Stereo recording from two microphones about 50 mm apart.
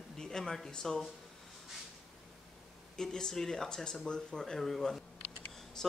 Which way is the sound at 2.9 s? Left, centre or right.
Centre.